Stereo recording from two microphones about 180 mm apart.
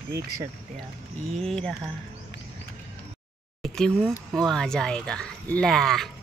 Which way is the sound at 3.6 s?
5° left (ahead or behind).